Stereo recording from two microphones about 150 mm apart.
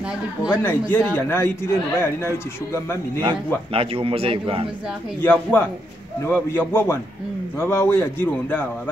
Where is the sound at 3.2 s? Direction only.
35° right (ahead or behind).